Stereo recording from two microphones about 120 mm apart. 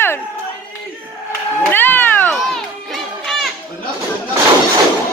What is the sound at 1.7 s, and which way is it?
Cat, 15° left (ahead or behind).